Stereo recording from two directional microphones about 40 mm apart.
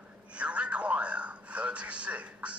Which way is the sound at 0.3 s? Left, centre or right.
Right.